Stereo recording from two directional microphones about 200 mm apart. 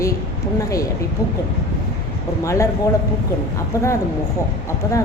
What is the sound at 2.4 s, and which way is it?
Speech, 15° left (ahead or behind).